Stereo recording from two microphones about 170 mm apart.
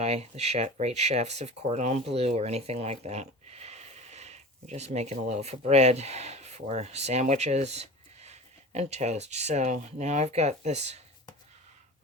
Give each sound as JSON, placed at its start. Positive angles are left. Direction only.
{"t": 0.0, "sound": "speech", "side_deg": -40}